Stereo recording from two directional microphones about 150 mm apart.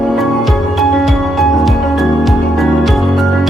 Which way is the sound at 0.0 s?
Centre (ahead or behind).